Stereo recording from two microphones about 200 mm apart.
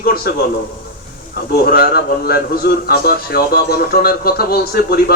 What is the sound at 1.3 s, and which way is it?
A man's voice, 50° left (ahead or behind).